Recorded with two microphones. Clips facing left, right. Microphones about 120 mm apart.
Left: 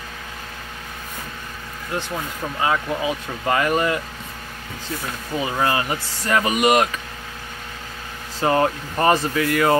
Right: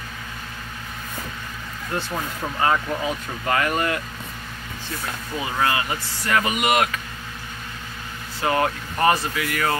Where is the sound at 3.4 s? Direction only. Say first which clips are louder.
Left 3 dB; 20° left (ahead or behind).